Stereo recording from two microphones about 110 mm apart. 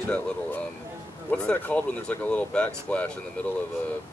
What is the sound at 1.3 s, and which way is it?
Speech, 10° left (ahead or behind).